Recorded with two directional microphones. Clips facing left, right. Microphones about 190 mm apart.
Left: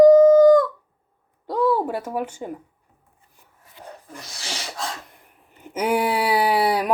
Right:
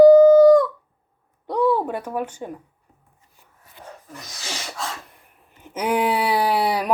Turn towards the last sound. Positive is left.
turn(degrees=5)  # may be behind; listen again after turning